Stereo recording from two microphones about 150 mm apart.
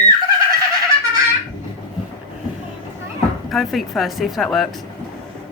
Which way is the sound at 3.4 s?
Centre (ahead or behind).